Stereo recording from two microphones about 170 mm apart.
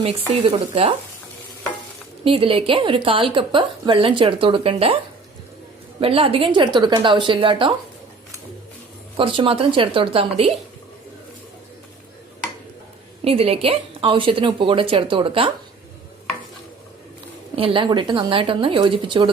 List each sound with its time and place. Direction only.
0.0 s a woman's voice: 35° right (ahead or behind)
2.2 s a woman's voice: 35° right (ahead or behind)
6.0 s a woman's voice: 35° right (ahead or behind)
9.1 s a woman's voice: 30° right (ahead or behind)
13.2 s a woman's voice: 35° right (ahead or behind)
17.5 s a woman's voice: 35° right (ahead or behind)